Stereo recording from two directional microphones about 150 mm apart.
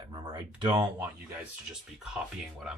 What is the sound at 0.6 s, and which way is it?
Speech, 35° right (ahead or behind).